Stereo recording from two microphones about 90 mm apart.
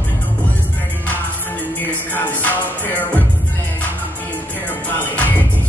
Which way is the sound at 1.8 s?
20° left (ahead or behind).